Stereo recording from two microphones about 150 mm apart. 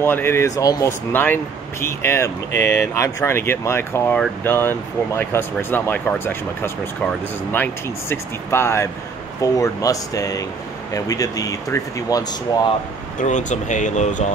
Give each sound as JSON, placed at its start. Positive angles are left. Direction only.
{"t": 0.0, "sound": "speech", "side_deg": 15}
{"t": 13.2, "sound": "speech", "side_deg": 55}